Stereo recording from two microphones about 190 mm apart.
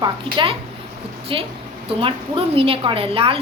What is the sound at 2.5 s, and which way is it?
Speech, 30° right (ahead or behind).